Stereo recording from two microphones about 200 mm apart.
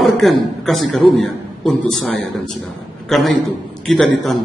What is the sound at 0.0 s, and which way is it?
A man's voice, centre (ahead or behind).